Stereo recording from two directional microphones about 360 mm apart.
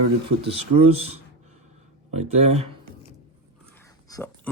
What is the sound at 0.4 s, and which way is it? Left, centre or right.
Speech, centre.